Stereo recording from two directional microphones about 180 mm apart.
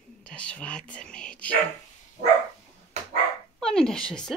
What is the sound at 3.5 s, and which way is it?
Speech, 5° left (ahead or behind).